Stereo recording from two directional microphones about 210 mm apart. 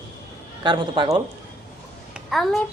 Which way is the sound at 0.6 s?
20° right (ahead or behind).